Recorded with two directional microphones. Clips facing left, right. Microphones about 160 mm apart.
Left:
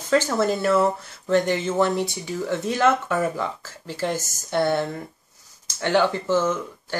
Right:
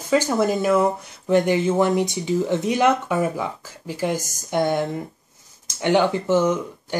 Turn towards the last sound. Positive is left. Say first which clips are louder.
# right 3 dB
turn(degrees=-15)  # may be behind; listen again after turning